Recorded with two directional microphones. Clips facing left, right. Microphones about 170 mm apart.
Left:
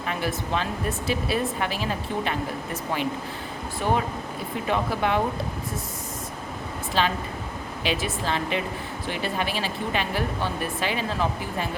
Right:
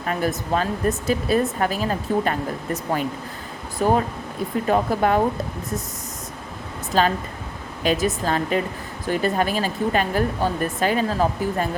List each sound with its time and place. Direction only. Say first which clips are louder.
0.0 s speech: right 4 dB; 45° right (ahead or behind)
3.8 s speech: right 5 dB; 40° right (ahead or behind)
6.9 s speech: right 5 dB; 45° right (ahead or behind)